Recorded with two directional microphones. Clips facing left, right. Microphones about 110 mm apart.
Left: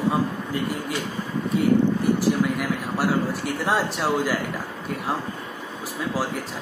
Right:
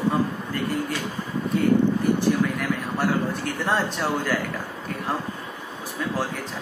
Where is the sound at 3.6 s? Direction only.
10° left (ahead or behind).